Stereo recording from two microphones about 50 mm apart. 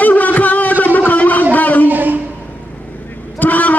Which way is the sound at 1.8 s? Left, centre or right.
Right.